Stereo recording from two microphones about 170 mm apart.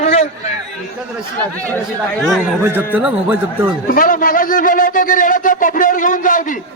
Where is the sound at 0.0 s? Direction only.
40° left (ahead or behind).